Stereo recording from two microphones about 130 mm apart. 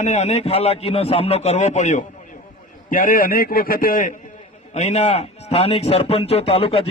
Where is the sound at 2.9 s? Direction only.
90° left.